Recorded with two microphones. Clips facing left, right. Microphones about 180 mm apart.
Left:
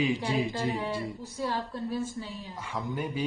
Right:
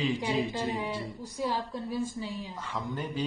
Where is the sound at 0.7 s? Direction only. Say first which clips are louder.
Left 2 dB; 15° right (ahead or behind).